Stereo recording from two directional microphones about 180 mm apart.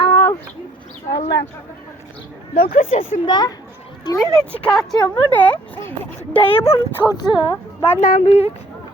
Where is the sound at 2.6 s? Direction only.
50° left (ahead or behind).